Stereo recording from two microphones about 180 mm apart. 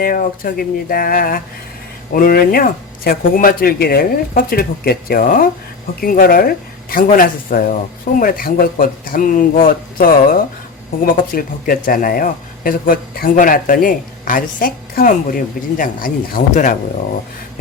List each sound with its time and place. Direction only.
0.0 s speech: 50° left (ahead or behind)